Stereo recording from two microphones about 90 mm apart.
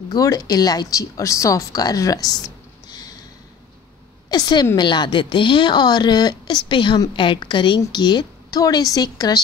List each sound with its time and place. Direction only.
0.1 s speech: 45° left (ahead or behind)
2.9 s a sound: 45° left (ahead or behind)
4.3 s a woman's voice: 50° left (ahead or behind)
6.6 s speech: 65° left (ahead or behind); by 9.4 s 45° left (ahead or behind)